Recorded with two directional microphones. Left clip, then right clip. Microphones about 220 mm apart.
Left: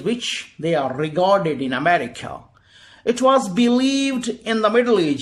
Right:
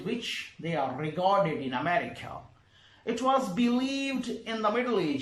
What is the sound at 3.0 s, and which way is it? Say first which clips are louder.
Speech: left 11 dB; 45° left (ahead or behind).